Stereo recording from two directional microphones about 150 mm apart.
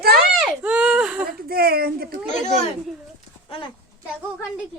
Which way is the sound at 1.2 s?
90° right.